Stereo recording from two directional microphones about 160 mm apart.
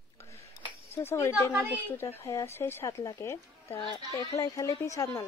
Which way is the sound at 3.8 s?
30° left (ahead or behind).